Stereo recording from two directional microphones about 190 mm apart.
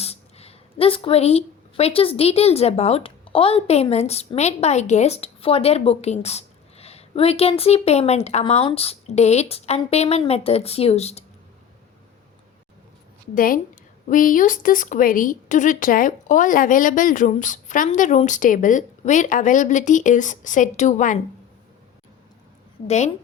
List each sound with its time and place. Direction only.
0.0 s a woman's voice: 30° left (ahead or behind)
13.3 s speech: 50° left (ahead or behind)
22.9 s a woman's voice: 35° left (ahead or behind)